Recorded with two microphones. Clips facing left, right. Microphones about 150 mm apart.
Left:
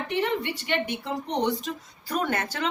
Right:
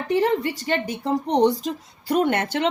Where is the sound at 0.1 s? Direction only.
35° right (ahead or behind).